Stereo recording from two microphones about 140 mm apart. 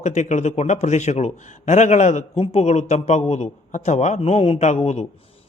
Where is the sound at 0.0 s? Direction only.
55° left (ahead or behind).